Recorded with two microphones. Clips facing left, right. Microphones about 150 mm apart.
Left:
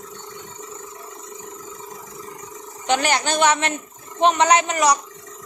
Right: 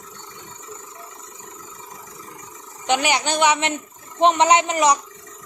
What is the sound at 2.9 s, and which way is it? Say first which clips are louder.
A woman's voice: even; 15° right (ahead or behind).